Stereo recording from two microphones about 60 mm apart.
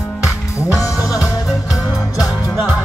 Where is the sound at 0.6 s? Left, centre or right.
Left.